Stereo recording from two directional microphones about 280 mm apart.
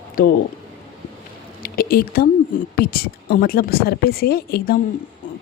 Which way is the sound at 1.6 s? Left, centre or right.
Left.